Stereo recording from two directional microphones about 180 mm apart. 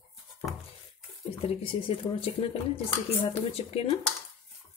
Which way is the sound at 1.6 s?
30° left (ahead or behind).